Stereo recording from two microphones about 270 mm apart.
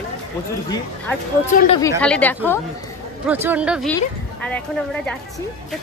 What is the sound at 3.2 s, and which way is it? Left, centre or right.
A woman's voice, centre.